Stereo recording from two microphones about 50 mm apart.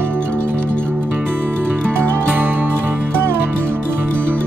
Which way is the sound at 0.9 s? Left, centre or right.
Right.